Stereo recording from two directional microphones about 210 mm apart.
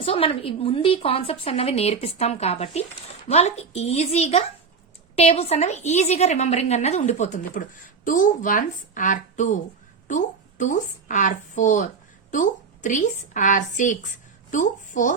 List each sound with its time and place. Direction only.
0.0 s a woman's voice: 25° left (ahead or behind)